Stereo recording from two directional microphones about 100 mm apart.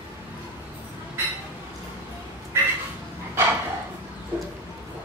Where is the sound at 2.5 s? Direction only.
25° right (ahead or behind).